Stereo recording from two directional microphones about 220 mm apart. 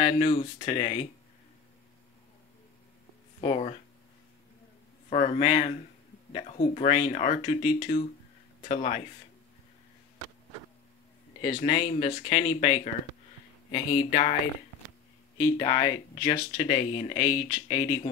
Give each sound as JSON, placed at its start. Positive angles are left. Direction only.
{"t": 0.0, "sound": "speech", "side_deg": 25}
{"t": 3.3, "sound": "speech", "side_deg": 25}
{"t": 5.1, "sound": "speech", "side_deg": 30}
{"t": 11.4, "sound": "speech", "side_deg": 25}
{"t": 15.3, "sound": "speech", "side_deg": 15}
{"t": 16.5, "sound": "speech", "side_deg": 30}